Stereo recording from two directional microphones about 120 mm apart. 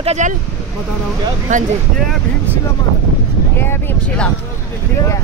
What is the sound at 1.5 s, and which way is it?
Speech, 90° right.